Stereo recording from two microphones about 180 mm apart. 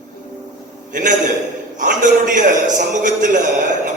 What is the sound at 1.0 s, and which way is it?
A man's voice, 45° right (ahead or behind).